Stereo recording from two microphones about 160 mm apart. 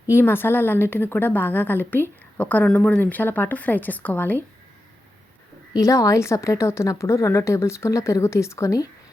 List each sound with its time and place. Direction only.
0.1 s a woman's voice: 15° left (ahead or behind)
5.7 s a woman's voice: 20° left (ahead or behind)